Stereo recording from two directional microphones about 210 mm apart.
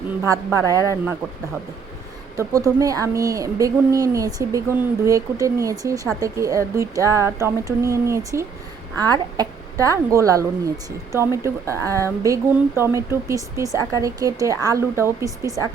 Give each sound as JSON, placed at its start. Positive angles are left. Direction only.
{"t": 0.3, "sound": "speech", "side_deg": -15}
{"t": 2.3, "sound": "speech", "side_deg": -15}